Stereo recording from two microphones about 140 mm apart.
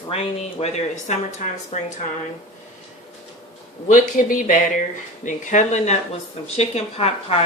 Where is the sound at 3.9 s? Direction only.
70° left (ahead or behind).